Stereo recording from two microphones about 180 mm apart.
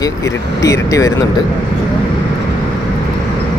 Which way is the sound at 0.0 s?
20° left (ahead or behind).